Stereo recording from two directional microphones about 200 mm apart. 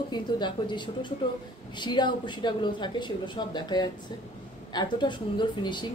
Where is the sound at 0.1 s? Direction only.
25° left (ahead or behind).